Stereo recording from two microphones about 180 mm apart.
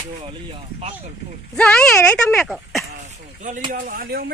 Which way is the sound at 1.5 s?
5° left (ahead or behind).